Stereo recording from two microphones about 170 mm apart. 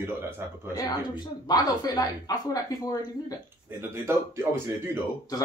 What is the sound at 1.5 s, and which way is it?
A man's voice, 25° left (ahead or behind).